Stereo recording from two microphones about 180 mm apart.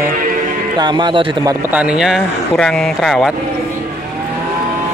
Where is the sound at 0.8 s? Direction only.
25° right (ahead or behind).